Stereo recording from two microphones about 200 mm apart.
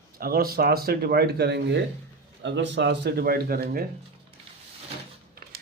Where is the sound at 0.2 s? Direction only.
50° right (ahead or behind).